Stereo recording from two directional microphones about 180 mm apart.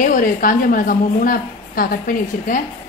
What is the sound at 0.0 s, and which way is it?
A woman's voice, 50° left (ahead or behind).